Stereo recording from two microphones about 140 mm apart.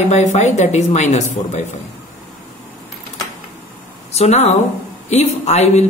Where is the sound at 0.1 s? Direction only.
55° left (ahead or behind).